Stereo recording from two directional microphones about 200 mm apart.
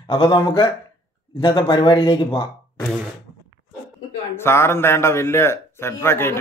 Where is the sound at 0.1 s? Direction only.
25° left (ahead or behind).